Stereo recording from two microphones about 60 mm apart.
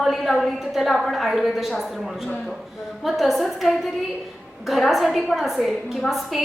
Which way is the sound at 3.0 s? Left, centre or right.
Centre.